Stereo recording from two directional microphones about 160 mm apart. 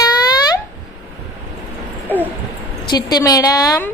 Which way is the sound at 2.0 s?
10° right (ahead or behind).